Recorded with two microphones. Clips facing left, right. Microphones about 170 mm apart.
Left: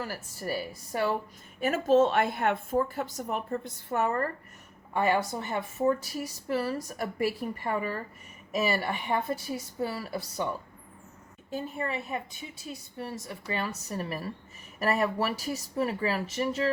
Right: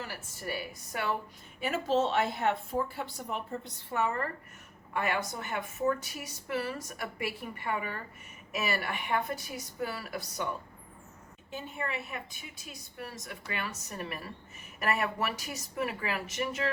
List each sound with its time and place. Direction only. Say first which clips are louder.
0.0 s a woman's voice: left 4 dB; 40° left (ahead or behind)
1.6 s a woman's voice: left 6 dB; 45° left (ahead or behind)
4.9 s a woman's voice: left 6 dB; 30° left (ahead or behind)
11.5 s a woman's voice: left 4 dB; 35° left (ahead or behind)